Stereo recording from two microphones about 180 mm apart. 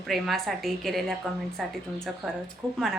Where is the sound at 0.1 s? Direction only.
Centre (ahead or behind).